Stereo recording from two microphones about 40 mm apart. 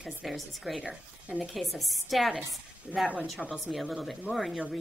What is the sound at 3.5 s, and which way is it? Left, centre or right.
A woman's voice, centre.